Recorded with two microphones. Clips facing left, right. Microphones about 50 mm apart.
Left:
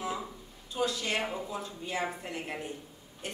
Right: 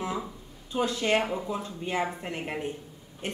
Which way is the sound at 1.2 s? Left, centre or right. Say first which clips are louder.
Right 4 dB; centre.